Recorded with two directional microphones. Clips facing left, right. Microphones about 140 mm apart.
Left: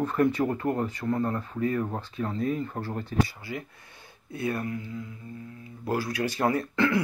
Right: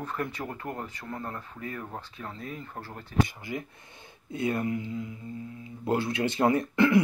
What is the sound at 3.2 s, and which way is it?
Speech, 20° right (ahead or behind).